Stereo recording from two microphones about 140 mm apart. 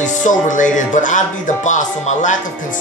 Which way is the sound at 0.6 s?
60° left (ahead or behind).